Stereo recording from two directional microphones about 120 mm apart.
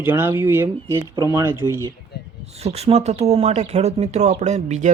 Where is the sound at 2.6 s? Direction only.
60° right (ahead or behind).